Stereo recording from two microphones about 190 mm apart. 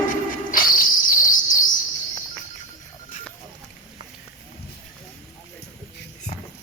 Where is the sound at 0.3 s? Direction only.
45° left (ahead or behind).